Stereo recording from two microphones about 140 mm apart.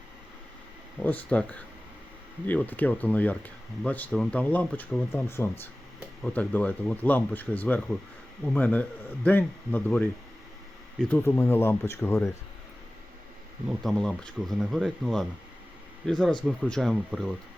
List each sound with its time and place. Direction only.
1.0 s speech: 10° left (ahead or behind)
11.1 s speech: 15° left (ahead or behind)
13.7 s speech: 5° left (ahead or behind)